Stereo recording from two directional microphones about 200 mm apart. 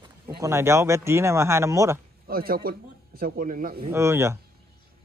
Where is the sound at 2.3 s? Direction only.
45° right (ahead or behind).